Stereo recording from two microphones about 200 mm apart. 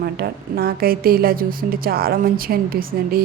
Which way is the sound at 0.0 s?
50° right (ahead or behind).